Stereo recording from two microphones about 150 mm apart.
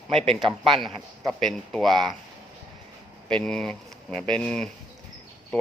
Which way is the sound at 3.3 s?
5° left (ahead or behind).